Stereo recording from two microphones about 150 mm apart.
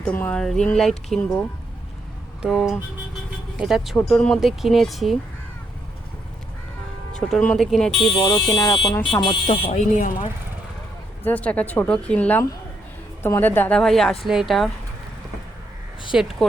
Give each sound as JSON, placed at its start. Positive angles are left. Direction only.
{"t": 0.0, "sound": "speech", "side_deg": 10}
{"t": 7.1, "sound": "speech", "side_deg": 5}
{"t": 8.5, "sound": "speech", "side_deg": 30}
{"t": 9.7, "sound": "speech", "side_deg": 60}
{"t": 11.2, "sound": "speech", "side_deg": 10}
{"t": 16.1, "sound": "speech", "side_deg": -5}